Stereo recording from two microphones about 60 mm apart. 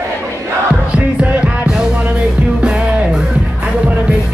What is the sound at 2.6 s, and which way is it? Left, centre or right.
Music, centre.